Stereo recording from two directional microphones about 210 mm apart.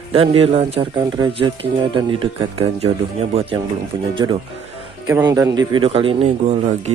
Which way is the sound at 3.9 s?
20° right (ahead or behind).